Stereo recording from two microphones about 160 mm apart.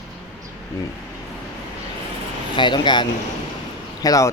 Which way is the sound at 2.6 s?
30° left (ahead or behind).